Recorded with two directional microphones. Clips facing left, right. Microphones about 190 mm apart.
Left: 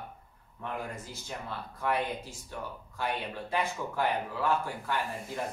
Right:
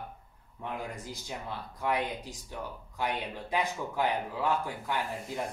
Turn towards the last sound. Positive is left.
turn(degrees=-15)  # may be behind; listen again after turning